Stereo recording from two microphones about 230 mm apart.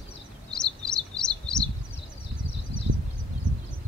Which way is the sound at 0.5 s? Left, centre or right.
Centre.